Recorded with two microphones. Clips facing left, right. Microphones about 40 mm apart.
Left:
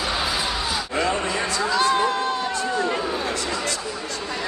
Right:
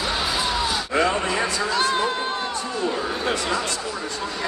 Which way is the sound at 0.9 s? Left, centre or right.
Centre.